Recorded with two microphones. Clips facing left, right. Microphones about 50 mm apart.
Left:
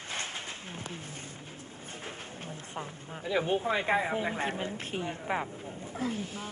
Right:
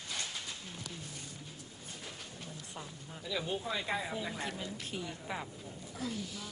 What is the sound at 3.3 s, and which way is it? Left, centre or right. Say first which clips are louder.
Speech: left 8 dB; left.